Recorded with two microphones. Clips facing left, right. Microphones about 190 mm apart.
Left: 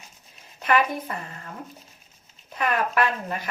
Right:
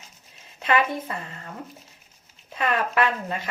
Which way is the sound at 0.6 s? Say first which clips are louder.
Even; 25° right (ahead or behind).